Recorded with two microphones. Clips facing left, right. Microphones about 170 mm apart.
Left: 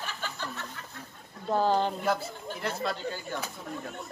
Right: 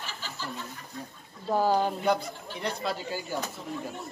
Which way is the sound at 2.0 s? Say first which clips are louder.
Right 2 dB; centre (ahead or behind).